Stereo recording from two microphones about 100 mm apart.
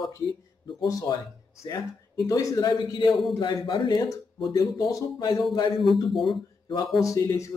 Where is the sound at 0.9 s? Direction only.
35° left (ahead or behind).